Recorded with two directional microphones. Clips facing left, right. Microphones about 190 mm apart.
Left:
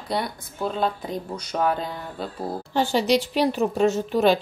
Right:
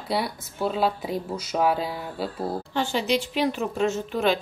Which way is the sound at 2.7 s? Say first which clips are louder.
Left 5 dB; 35° left (ahead or behind).